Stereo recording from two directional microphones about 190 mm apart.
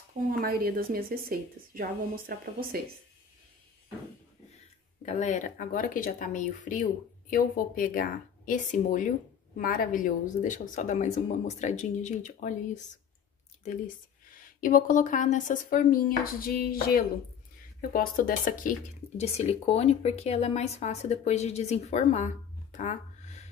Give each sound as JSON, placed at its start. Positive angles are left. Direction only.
{"t": 0.3, "sound": "a woman's voice", "side_deg": -50}
{"t": 5.0, "sound": "speech", "side_deg": 35}
{"t": 14.6, "sound": "speech", "side_deg": 45}